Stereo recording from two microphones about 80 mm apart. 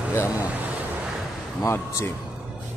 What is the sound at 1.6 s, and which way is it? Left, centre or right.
Speech, left.